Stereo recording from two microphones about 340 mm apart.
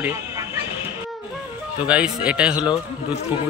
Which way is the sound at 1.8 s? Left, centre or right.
Centre.